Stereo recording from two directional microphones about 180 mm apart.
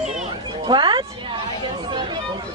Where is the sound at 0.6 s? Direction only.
25° right (ahead or behind).